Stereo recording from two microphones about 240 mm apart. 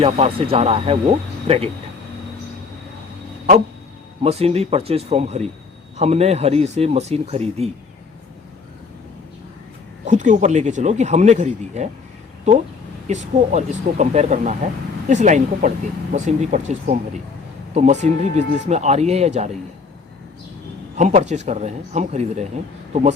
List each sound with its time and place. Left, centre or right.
0.0 s speech: right
4.2 s speech: right
10.1 s speech: right
13.1 s speech: right
20.9 s speech: right